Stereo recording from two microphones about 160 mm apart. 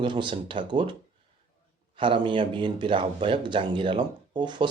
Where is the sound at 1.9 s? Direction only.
30° right (ahead or behind).